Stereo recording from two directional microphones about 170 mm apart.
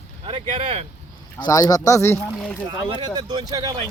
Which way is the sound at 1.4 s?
20° left (ahead or behind).